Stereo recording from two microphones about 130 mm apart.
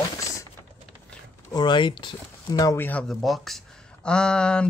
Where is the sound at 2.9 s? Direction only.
5° left (ahead or behind).